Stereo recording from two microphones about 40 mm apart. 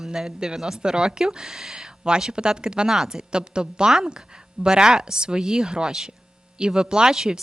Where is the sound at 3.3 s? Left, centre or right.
Right.